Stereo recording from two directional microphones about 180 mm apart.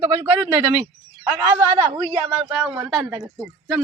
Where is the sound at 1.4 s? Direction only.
20° right (ahead or behind).